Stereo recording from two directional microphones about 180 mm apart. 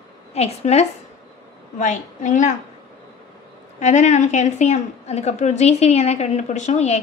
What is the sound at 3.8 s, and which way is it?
A woman's voice, 40° left (ahead or behind).